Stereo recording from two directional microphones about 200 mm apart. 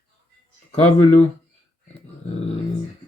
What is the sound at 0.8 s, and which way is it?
Speech, 35° left (ahead or behind).